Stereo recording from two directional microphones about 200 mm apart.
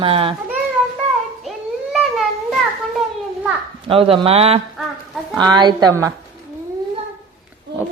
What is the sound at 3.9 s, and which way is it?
Speech, 25° right (ahead or behind).